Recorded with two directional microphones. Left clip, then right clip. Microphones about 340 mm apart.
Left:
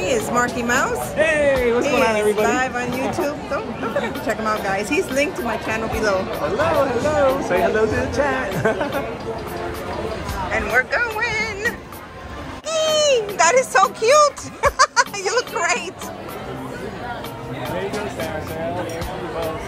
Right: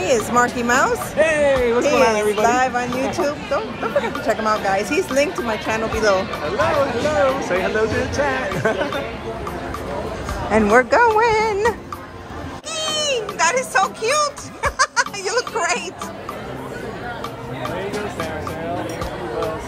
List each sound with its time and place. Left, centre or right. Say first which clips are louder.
0.0 s speech: right 3 dB; centre
7.3 s speech: left 1 dB; centre
10.5 s speech: right 5 dB; centre
12.7 s speech: left 5 dB; centre
17.6 s music: even; centre